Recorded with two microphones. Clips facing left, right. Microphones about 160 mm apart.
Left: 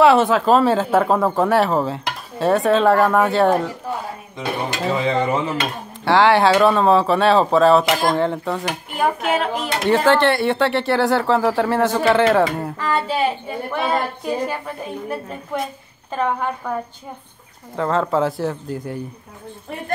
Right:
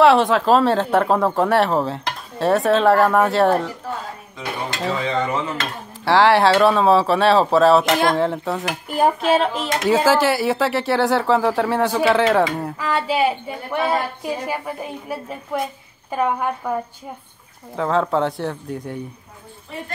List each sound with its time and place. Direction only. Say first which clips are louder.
0.0 s speech: even; centre (ahead or behind)
4.9 s a sound: left 3 dB; 10° left (ahead or behind)
6.0 s speech: even; centre (ahead or behind)
8.8 s speech: right 4 dB; 35° right (ahead or behind)
9.8 s a woman's voice: left 1 dB; 5° right (ahead or behind)
17.7 s speech: even; centre (ahead or behind)